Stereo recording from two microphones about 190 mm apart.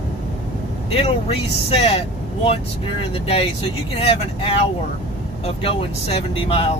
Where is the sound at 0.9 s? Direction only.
30° left (ahead or behind).